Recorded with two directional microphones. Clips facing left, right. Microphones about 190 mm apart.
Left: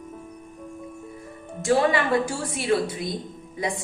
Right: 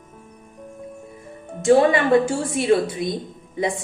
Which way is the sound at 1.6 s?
25° right (ahead or behind).